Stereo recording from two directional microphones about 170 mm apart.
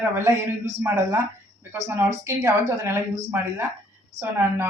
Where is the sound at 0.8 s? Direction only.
15° right (ahead or behind).